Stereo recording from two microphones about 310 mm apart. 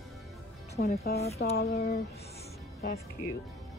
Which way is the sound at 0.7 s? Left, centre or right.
Left.